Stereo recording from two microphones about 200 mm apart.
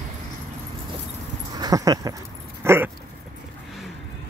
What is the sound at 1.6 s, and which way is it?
Dog, 20° right (ahead or behind).